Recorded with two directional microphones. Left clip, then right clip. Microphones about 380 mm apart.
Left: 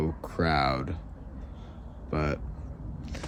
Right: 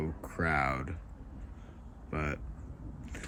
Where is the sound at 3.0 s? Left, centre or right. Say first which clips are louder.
Left 5 dB; centre.